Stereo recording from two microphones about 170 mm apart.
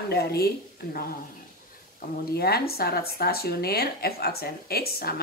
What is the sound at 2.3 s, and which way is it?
Speech, 65° left (ahead or behind).